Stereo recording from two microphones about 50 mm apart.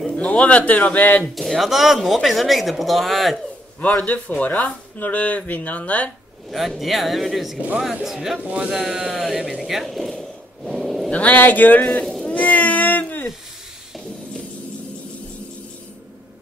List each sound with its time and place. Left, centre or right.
0.1 s speech: left
1.3 s speech: centre
4.0 s speech: left
6.5 s speech: centre
8.5 s speech: right
8.7 s speech: centre
11.1 s speech: left
11.3 s speech: left
11.8 s speech: centre
12.2 s cat: centre
12.4 s a sound: left